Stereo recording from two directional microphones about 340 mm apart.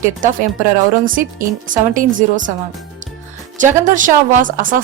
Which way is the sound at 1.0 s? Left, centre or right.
Right.